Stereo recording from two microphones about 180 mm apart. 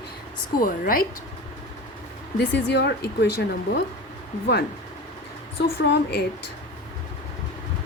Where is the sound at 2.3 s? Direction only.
70° left (ahead or behind).